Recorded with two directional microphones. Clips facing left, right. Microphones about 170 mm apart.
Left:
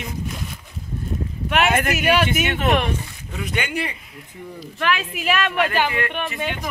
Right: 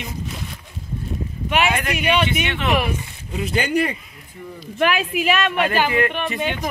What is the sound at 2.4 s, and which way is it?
Speech, 45° left (ahead or behind).